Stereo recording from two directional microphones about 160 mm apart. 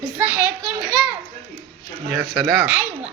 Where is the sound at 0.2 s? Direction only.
10° right (ahead or behind).